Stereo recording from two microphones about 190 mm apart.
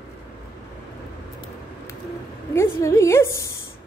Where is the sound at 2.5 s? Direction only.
15° left (ahead or behind).